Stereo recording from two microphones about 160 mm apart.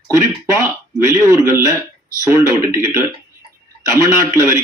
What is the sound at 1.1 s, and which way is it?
Speech, 20° right (ahead or behind).